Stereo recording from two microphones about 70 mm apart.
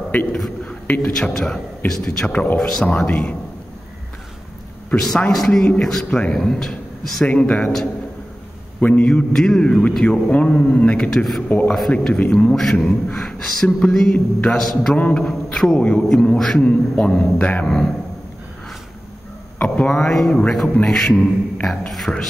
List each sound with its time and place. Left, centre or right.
0.1 s a man's voice: left
0.7 s a sound: left
1.1 s a man's voice: centre
4.9 s a man's voice: centre
7.2 s a man's voice: centre
8.8 s a man's voice: centre
15.0 s a man's voice: centre
16.6 s a man's voice: centre
17.6 s a man's voice: centre
19.9 s a man's voice: centre